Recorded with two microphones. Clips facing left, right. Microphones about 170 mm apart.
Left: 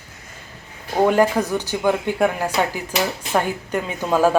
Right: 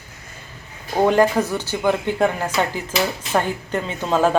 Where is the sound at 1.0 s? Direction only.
10° left (ahead or behind).